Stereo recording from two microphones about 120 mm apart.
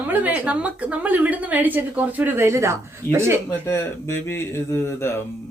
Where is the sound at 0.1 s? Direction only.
15° right (ahead or behind).